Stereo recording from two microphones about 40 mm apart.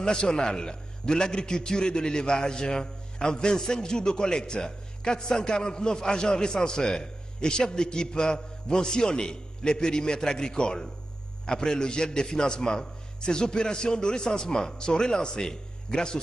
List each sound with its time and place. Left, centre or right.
0.0 s a man's voice: centre